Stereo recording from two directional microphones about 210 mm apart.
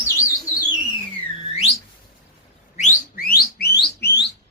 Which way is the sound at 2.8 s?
40° left (ahead or behind).